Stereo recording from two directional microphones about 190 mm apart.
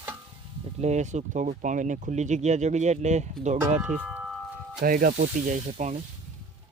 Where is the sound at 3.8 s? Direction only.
5° right (ahead or behind).